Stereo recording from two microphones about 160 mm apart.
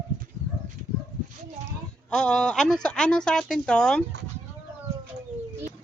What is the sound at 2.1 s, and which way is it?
Speech, 5° left (ahead or behind).